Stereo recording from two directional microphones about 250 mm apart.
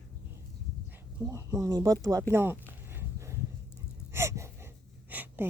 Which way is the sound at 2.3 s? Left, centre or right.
Centre.